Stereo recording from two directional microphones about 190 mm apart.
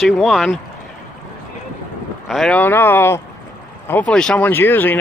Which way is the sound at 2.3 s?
5° left (ahead or behind).